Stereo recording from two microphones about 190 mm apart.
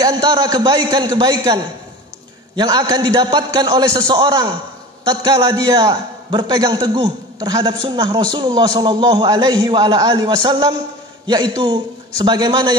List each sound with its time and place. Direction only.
0.0 s a man's voice: 20° right (ahead or behind)